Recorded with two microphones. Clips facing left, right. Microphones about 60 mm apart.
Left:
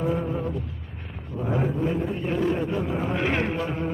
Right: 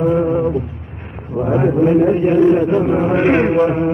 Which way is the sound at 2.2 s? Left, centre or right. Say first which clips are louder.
Right 13 dB; right.